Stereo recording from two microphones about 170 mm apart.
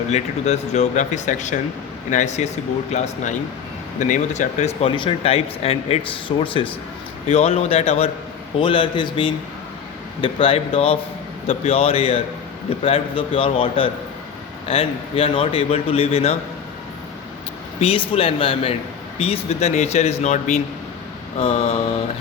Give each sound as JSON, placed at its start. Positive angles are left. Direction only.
{"t": 0.1, "sound": "speech", "side_deg": 40}
{"t": 17.7, "sound": "speech", "side_deg": 35}